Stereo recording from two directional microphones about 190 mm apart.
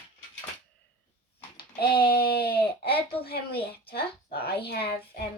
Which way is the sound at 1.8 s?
55° left (ahead or behind).